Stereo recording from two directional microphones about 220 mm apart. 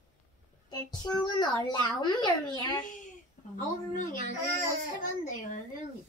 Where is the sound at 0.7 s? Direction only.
20° left (ahead or behind).